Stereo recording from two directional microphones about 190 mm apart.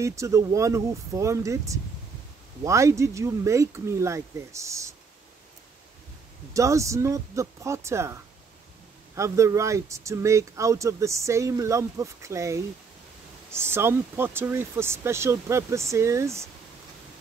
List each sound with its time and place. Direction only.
0.0 s speech: 15° right (ahead or behind)
6.5 s speech: 15° right (ahead or behind)